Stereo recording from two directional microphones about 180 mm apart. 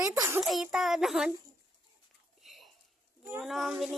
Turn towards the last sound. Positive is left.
turn(degrees=0)  # may be behind; listen again after turning